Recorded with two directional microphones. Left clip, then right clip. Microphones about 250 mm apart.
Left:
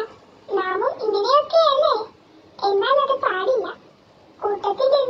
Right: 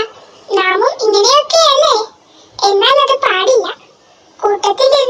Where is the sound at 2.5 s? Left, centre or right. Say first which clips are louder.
Right 9 dB; right.